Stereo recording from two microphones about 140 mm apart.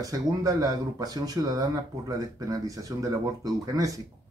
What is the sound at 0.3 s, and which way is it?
A man's voice, 25° right (ahead or behind).